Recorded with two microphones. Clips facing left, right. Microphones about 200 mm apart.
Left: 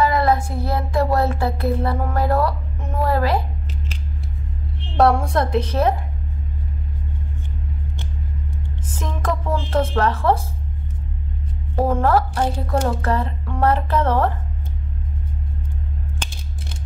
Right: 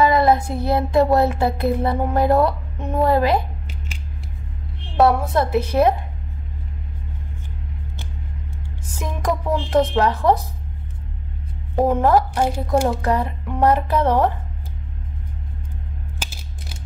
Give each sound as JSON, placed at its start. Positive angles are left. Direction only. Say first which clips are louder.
{"t": 0.0, "sound": "child singing", "louder": "right 2 dB", "side_deg": -20}
{"t": 4.9, "sound": "a woman's voice", "louder": "even", "side_deg": -5}
{"t": 8.9, "sound": "a sound", "louder": "right 2 dB", "side_deg": -10}
{"t": 11.7, "sound": "a woman's voice", "louder": "right 2 dB", "side_deg": -15}
{"t": 16.2, "sound": "mechanisms", "louder": "left 2 dB", "side_deg": -5}